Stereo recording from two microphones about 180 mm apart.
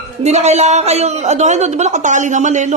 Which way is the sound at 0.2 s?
40° right (ahead or behind).